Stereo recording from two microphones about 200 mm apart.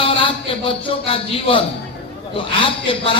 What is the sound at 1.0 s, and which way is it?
Speech, 25° left (ahead or behind).